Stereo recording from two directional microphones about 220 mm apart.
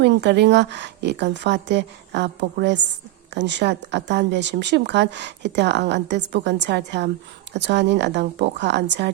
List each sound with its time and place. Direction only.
0.0 s speech: 50° right (ahead or behind)